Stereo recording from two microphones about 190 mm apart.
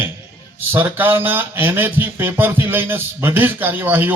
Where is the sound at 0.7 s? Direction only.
10° right (ahead or behind).